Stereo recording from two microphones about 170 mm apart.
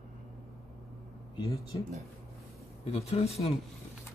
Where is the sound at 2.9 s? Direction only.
35° left (ahead or behind).